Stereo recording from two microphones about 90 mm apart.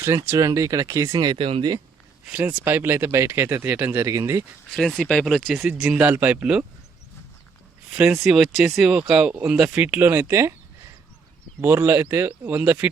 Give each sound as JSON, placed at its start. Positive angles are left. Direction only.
{"t": 0.3, "sound": "speech", "side_deg": -35}
{"t": 1.2, "sound": "speech", "side_deg": -55}
{"t": 2.2, "sound": "speech", "side_deg": -15}
{"t": 4.7, "sound": "speech", "side_deg": 5}
{"t": 6.0, "sound": "speech", "side_deg": -20}
{"t": 7.9, "sound": "speech", "side_deg": -5}
{"t": 11.6, "sound": "speech", "side_deg": -25}